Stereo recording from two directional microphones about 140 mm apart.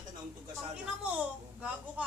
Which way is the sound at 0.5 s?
5° right (ahead or behind).